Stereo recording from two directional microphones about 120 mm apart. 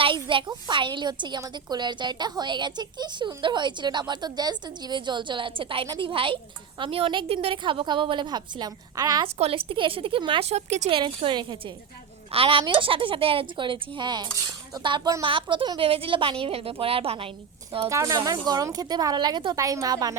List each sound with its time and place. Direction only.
0.0 s a woman's voice: 45° right (ahead or behind)
9.2 s speech: 50° right (ahead or behind)
10.5 s speech: 65° right (ahead or behind)
10.9 s a woman's voice: 45° right (ahead or behind)
17.8 s a woman's voice: 25° right (ahead or behind)